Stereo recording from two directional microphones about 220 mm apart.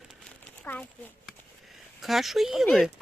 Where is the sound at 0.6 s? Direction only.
10° left (ahead or behind).